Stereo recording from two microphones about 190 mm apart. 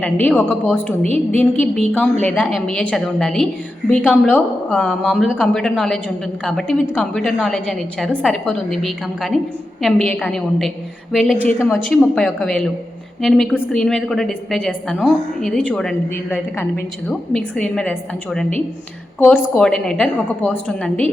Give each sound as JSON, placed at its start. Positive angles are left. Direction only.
{"t": 0.0, "sound": "a woman's voice", "side_deg": 5}